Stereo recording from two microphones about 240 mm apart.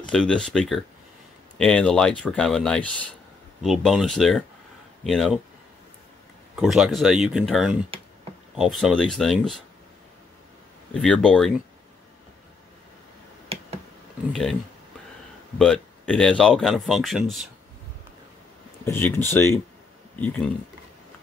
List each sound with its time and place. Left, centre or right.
0.1 s speech: centre
6.6 s speech: centre
10.9 s speech: centre
13.5 s a sound: right
14.3 s speech: centre
15.6 s speech: centre
18.9 s speech: centre